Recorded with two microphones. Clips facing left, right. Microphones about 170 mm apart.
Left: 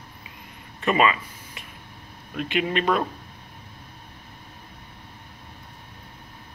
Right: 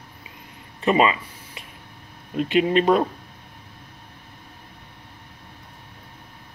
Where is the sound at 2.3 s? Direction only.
35° right (ahead or behind).